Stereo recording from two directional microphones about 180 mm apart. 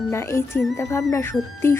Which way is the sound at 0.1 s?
15° left (ahead or behind).